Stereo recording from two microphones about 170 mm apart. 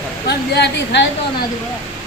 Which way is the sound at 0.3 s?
80° left.